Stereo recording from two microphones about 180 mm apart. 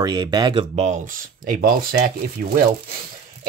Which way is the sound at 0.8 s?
40° right (ahead or behind).